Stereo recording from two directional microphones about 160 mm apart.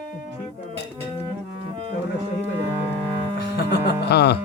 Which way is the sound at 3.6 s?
90° left.